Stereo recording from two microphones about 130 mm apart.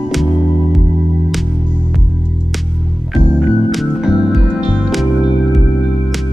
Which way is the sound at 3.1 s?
Centre (ahead or behind).